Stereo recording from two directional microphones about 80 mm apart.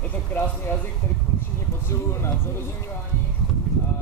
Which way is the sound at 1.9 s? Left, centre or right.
Left.